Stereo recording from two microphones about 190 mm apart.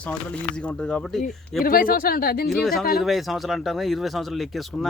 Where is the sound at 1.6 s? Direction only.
50° left (ahead or behind).